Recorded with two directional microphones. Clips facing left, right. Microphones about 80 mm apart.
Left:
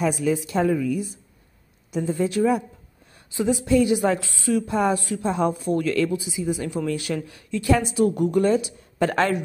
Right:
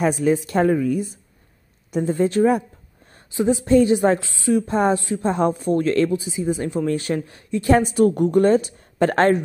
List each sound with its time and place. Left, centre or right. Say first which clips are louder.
0.0 s a woman's voice: right 4 dB; right
3.6 s speech: right 4 dB; right
4.3 s a woman's voice: right 3 dB; right
4.6 s speech: right 3 dB; right
5.2 s speech: right 2 dB; right